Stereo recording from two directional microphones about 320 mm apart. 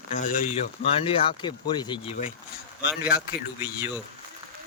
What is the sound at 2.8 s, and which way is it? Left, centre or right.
Speech, centre.